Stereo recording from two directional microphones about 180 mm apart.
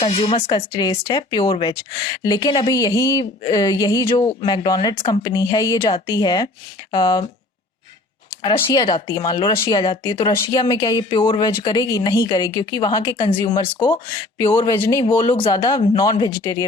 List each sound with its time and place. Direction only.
0.0 s speech: 30° left (ahead or behind)
8.4 s speech: 20° left (ahead or behind)